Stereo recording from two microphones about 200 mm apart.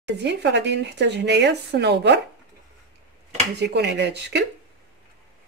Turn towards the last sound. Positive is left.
turn(degrees=-60)  # may be behind; listen again after turning